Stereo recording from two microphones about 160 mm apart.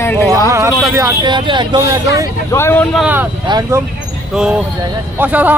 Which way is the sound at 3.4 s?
25° right (ahead or behind).